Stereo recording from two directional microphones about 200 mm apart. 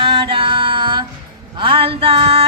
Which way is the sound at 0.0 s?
25° right (ahead or behind).